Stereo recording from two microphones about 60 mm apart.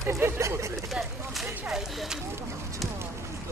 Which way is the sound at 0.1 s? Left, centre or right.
Right.